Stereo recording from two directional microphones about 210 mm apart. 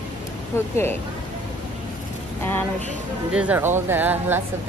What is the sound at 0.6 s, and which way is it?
Speech, 10° left (ahead or behind).